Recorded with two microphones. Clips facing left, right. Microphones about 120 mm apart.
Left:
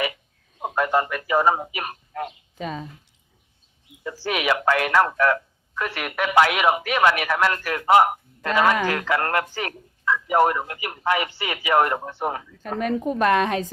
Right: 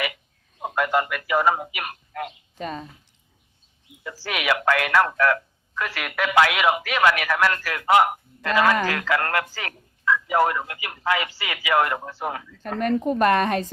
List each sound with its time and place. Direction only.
0.8 s a man's voice: 25° left (ahead or behind)
2.6 s a woman's voice: centre (ahead or behind)
4.0 s speech: 20° left (ahead or behind)
12.8 s a woman's voice: 5° left (ahead or behind)